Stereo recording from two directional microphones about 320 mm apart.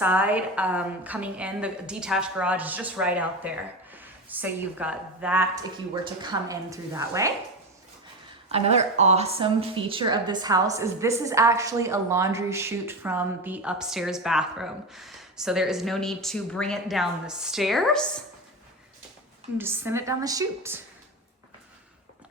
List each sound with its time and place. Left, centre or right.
0.0 s a woman's voice: centre
8.4 s a woman's voice: centre
19.5 s a woman's voice: centre